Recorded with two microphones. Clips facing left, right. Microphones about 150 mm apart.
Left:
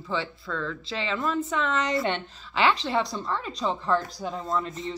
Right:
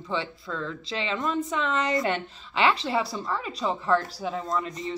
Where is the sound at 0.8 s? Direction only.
30° left (ahead or behind).